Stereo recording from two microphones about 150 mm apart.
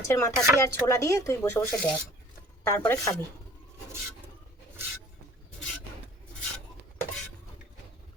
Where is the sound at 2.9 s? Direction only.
20° left (ahead or behind).